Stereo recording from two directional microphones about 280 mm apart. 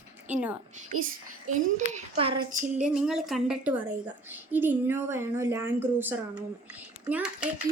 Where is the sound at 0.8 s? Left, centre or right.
Right.